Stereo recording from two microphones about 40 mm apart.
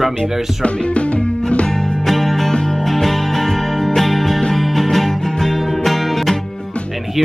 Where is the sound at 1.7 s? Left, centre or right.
Centre.